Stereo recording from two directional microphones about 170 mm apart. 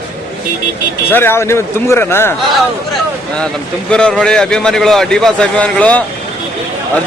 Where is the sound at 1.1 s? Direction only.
15° left (ahead or behind).